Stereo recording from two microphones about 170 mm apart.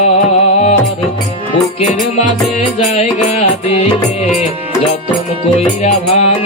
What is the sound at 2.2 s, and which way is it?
Music, 40° left (ahead or behind).